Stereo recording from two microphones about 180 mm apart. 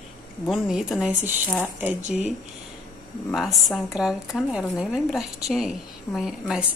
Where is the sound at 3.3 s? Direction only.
Centre (ahead or behind).